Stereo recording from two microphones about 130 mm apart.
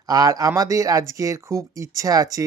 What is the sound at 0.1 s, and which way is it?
Speech, 30° right (ahead or behind).